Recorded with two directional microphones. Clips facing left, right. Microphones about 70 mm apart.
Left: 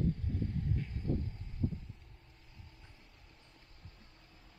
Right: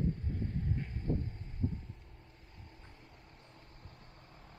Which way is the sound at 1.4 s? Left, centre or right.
Right.